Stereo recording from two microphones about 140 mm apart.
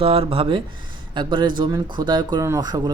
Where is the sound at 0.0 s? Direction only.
45° right (ahead or behind).